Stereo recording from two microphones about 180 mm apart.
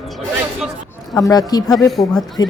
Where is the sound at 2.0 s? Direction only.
20° left (ahead or behind).